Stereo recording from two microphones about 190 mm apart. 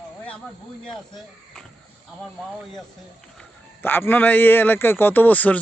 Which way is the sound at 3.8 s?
10° left (ahead or behind).